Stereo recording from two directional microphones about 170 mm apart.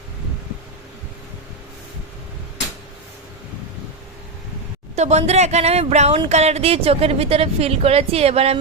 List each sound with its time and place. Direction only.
4.9 s speech: 40° right (ahead or behind)